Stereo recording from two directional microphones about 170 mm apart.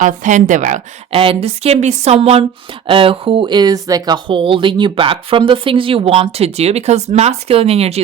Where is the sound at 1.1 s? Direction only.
35° right (ahead or behind).